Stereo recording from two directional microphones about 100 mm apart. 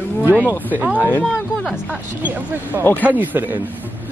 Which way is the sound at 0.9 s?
15° left (ahead or behind).